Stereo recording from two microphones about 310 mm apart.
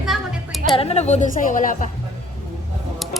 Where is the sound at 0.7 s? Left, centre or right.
Centre.